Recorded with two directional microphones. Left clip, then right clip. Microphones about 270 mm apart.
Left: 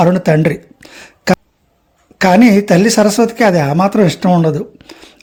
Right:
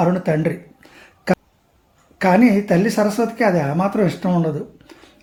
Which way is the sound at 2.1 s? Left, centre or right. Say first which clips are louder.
Left 6 dB; left.